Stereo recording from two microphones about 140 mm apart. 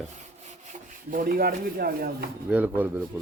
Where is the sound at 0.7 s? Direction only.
70° right (ahead or behind); by 2.3 s 90° right.